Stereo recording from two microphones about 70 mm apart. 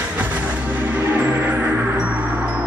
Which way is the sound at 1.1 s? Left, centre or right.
Right.